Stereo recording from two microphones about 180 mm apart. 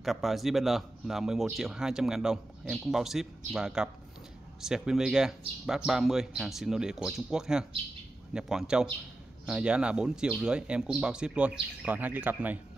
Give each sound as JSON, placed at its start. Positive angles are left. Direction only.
{"t": 0.0, "sound": "a man's voice", "side_deg": 0}